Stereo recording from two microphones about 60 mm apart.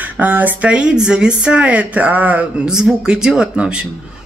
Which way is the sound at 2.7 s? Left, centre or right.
Centre.